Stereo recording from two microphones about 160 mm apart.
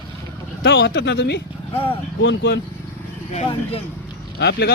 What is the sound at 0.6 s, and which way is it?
Speech, 90° left.